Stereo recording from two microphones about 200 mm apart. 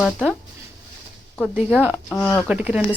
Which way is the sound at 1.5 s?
10° right (ahead or behind).